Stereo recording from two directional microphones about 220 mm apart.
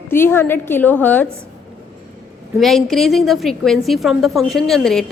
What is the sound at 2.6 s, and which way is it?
A woman's voice, centre (ahead or behind).